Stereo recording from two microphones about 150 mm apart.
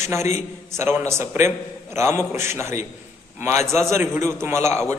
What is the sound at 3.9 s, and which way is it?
Speech, 15° right (ahead or behind).